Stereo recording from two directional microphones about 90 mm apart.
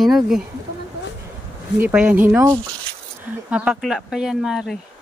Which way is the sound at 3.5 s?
15° right (ahead or behind).